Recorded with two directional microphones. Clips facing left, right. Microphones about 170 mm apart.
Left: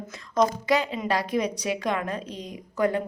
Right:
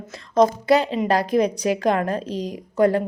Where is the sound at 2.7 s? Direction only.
30° right (ahead or behind).